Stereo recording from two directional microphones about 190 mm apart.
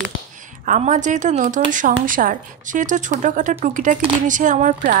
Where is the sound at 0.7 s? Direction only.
40° right (ahead or behind).